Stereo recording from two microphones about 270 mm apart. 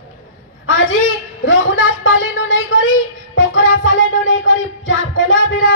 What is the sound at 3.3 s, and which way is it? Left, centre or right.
Music, left.